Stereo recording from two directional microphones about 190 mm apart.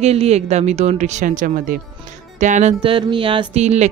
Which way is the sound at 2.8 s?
25° right (ahead or behind).